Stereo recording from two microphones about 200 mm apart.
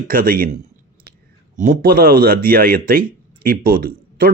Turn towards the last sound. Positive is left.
turn(degrees=-50)  # may be behind; listen again after turning